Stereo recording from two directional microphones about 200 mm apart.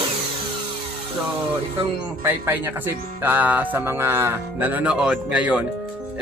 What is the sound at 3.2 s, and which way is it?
Music, 10° right (ahead or behind).